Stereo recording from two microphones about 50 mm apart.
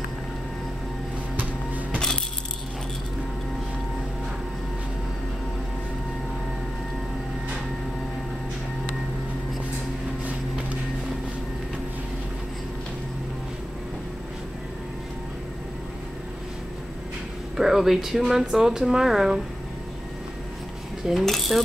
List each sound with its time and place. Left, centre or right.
1.3 s music: right
2.0 s coin: centre
17.6 s speech: centre
21.0 s coin: centre